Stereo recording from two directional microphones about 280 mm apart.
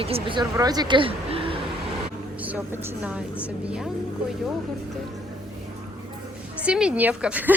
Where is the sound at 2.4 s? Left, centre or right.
Centre.